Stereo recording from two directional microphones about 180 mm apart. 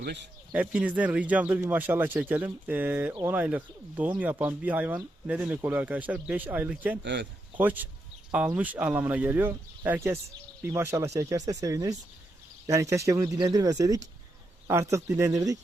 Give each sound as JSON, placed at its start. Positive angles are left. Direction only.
{"t": 0.5, "sound": "speech", "side_deg": -5}
{"t": 7.0, "sound": "speech", "side_deg": -75}
{"t": 7.5, "sound": "speech", "side_deg": -10}